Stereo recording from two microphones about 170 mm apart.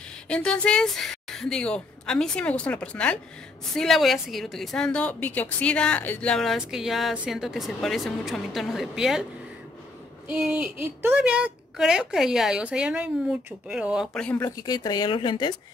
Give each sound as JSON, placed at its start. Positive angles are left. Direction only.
{"t": 0.3, "sound": "a woman's voice", "side_deg": 5}
{"t": 10.2, "sound": "a woman's voice", "side_deg": -5}
{"t": 14.2, "sound": "speech", "side_deg": 15}